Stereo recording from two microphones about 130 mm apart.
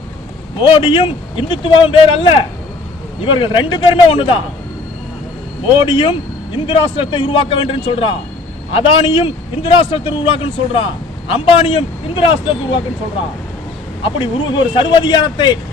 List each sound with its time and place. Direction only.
0.7 s speech: 40° left (ahead or behind)
5.7 s a man's voice: 40° left (ahead or behind)
14.0 s speech: 40° left (ahead or behind)